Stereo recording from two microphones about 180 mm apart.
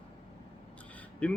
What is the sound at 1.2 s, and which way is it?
Speech, 10° left (ahead or behind).